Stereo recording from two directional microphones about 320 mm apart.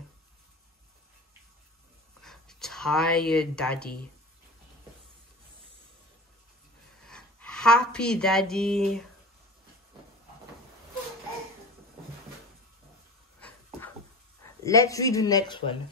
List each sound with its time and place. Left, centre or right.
2.2 s speech: centre
7.1 s speech: centre
13.4 s dog: centre
14.6 s speech: centre